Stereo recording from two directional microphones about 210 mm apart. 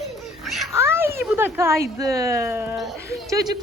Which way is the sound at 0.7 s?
10° right (ahead or behind).